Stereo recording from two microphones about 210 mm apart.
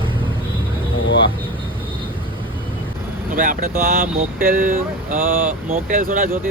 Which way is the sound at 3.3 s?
40° right (ahead or behind).